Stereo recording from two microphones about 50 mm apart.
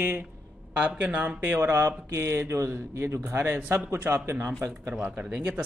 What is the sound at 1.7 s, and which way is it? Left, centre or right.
Speech, right.